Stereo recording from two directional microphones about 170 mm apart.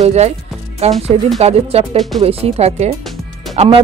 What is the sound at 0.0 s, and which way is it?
Speech, 40° right (ahead or behind).